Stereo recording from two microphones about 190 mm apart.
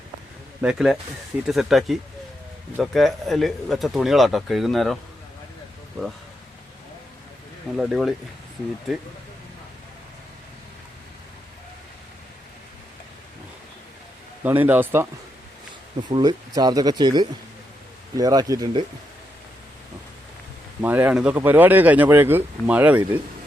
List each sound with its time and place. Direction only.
0.6 s speech: 5° right (ahead or behind)
6.0 s speech: centre (ahead or behind)
7.8 s speech: centre (ahead or behind)
14.4 s speech: 10° right (ahead or behind)
16.0 s speech: 20° right (ahead or behind)
20.8 s speech: 10° right (ahead or behind)